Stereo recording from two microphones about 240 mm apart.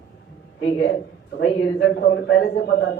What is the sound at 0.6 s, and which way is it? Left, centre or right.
A man's voice, left.